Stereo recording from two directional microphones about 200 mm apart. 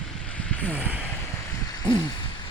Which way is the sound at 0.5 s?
5° left (ahead or behind).